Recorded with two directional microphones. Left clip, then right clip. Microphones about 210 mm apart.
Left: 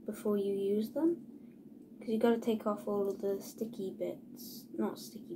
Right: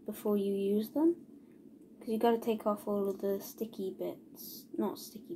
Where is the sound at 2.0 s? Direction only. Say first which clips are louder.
Right 1 dB; 40° right (ahead or behind).